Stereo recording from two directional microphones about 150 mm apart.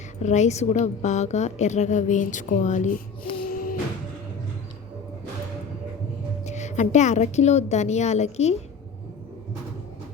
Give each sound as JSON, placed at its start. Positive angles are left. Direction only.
{"t": 0.2, "sound": "a woman's voice", "side_deg": 50}
{"t": 3.3, "sound": "music", "side_deg": 70}
{"t": 6.4, "sound": "a woman's voice", "side_deg": 50}